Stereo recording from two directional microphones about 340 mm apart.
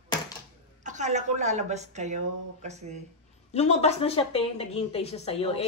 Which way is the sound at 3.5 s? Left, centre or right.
Centre.